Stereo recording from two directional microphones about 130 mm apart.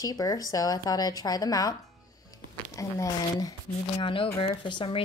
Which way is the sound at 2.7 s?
25° left (ahead or behind).